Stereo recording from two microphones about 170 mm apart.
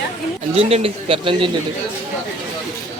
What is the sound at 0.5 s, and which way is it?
Speech, 35° right (ahead or behind).